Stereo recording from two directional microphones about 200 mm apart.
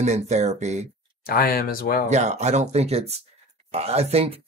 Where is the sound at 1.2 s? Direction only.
50° left (ahead or behind).